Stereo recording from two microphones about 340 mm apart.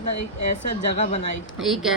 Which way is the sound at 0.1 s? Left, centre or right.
Left.